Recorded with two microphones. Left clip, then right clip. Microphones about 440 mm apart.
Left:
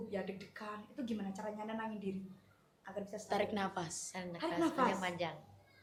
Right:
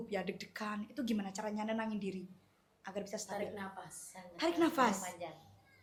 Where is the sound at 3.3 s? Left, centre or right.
Left.